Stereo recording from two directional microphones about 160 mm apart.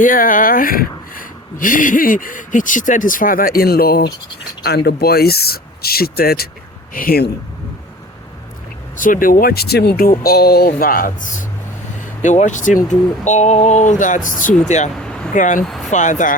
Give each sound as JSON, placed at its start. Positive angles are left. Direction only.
{"t": 0.0, "sound": "speech", "side_deg": 55}
{"t": 4.6, "sound": "speech", "side_deg": 90}
{"t": 9.0, "sound": "speech", "side_deg": 60}
{"t": 10.0, "sound": "speech", "side_deg": 70}
{"t": 14.9, "sound": "a sound", "side_deg": 5}
{"t": 15.4, "sound": "speech", "side_deg": 55}
{"t": 15.6, "sound": "speech", "side_deg": 0}
{"t": 15.9, "sound": "speech", "side_deg": 50}